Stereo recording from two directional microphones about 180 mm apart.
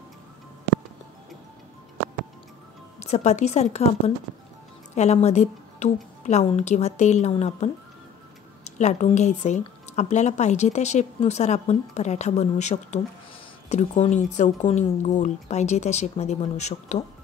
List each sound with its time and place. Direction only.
3.0 s speech: 40° left (ahead or behind)
4.9 s a woman's voice: 40° left (ahead or behind)